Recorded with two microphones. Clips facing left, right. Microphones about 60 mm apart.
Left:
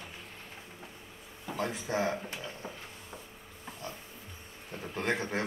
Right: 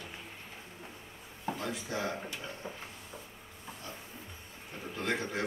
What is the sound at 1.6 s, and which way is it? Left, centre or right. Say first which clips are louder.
Speech: left 7 dB; left.